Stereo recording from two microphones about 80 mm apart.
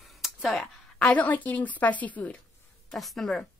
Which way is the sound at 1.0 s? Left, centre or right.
Centre.